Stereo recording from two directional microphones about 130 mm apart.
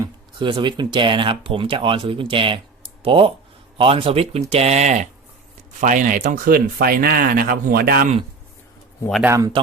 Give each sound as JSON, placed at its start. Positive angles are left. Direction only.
{"t": 0.3, "sound": "speech", "side_deg": -40}
{"t": 5.8, "sound": "speech", "side_deg": -80}
{"t": 9.2, "sound": "a man's voice", "side_deg": -20}